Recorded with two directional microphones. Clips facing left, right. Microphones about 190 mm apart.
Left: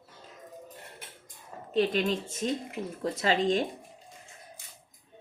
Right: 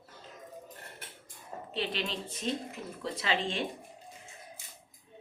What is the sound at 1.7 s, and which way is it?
A woman's voice, 45° left (ahead or behind).